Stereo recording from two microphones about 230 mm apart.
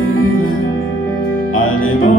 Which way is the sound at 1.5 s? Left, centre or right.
Left.